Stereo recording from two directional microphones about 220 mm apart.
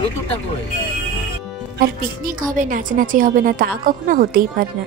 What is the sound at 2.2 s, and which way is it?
A woman's voice, 40° right (ahead or behind).